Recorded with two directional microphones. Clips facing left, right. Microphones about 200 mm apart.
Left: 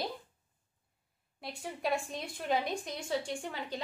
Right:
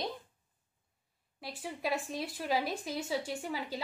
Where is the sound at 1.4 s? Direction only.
Centre (ahead or behind).